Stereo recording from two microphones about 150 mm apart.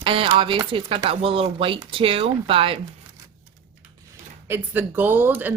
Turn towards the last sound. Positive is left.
turn(degrees=-10)  # may be behind; listen again after turning